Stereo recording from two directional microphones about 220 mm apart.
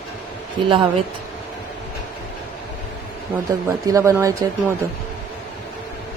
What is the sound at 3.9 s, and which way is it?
Speech, 15° right (ahead or behind).